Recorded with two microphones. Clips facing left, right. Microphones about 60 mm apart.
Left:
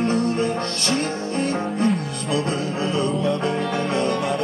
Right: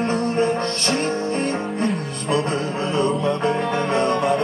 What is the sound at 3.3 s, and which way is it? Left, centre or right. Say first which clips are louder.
Music: right 2 dB; right.